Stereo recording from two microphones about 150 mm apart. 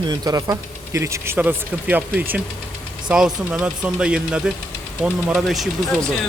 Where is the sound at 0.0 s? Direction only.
25° right (ahead or behind); by 5.6 s 5° right (ahead or behind).